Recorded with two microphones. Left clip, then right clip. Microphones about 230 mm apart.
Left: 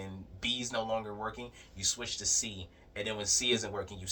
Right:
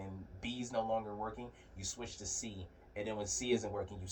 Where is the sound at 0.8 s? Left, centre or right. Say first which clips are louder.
Left 2 dB; left.